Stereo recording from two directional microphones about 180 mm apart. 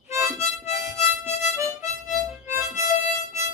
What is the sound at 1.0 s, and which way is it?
Harmonica, 40° left (ahead or behind).